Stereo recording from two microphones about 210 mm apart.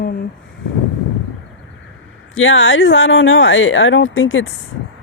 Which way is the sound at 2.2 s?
70° left (ahead or behind).